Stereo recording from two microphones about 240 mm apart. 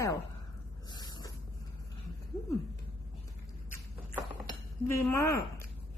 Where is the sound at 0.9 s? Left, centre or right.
Centre.